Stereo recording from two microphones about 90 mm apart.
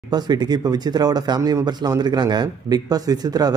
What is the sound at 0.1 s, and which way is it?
Speech, 50° right (ahead or behind).